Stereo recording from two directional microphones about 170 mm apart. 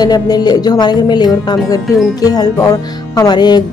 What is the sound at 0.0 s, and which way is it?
Speech, 25° left (ahead or behind).